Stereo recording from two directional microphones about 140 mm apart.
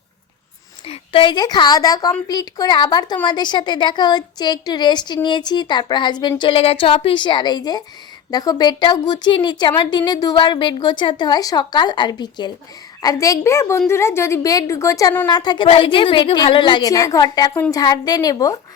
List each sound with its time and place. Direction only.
0.9 s a woman's voice: 40° left (ahead or behind)